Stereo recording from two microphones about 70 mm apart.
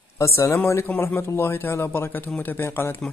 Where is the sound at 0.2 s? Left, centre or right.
Left.